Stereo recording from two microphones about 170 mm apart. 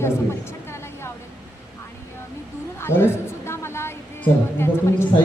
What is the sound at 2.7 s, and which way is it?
A woman's voice, 15° left (ahead or behind).